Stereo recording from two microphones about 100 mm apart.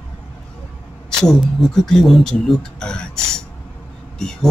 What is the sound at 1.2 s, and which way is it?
Speech, centre (ahead or behind).